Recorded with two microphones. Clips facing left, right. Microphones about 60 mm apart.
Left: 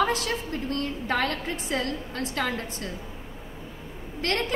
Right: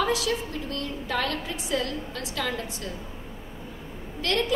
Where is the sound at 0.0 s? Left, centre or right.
Left.